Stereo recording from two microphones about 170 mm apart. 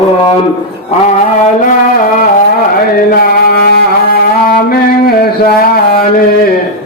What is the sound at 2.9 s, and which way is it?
Music, 60° left (ahead or behind).